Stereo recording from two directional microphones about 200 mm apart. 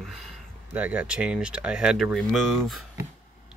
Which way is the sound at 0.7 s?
10° right (ahead or behind).